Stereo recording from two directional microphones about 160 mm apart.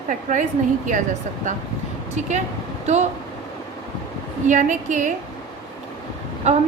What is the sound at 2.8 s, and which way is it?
Speech, 45° right (ahead or behind).